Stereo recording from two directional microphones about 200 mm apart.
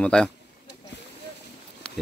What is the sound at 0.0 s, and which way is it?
Speech, 5° left (ahead or behind).